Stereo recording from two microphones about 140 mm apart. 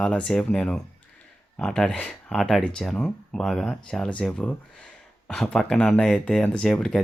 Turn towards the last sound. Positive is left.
turn(degrees=5)  # may be behind; listen again after turning